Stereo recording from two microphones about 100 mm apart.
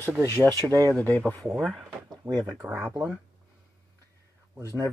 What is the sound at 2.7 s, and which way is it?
Speech, 20° right (ahead or behind).